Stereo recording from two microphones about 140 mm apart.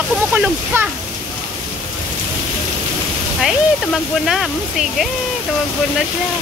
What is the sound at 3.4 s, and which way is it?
Speech, centre (ahead or behind).